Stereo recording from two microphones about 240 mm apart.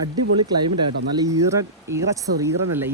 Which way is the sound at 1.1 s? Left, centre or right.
Centre.